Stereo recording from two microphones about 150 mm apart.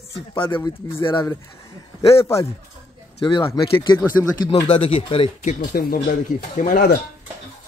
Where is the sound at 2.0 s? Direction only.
20° left (ahead or behind).